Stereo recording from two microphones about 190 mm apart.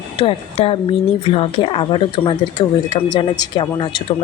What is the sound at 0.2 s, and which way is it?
Speech, 30° left (ahead or behind).